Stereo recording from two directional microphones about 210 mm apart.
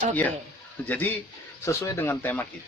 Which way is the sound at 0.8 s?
10° left (ahead or behind).